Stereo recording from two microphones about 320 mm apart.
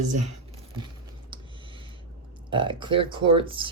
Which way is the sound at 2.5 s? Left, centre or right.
Centre.